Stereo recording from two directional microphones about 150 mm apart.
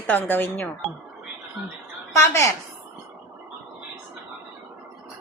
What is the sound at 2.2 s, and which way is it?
Speech, 20° left (ahead or behind).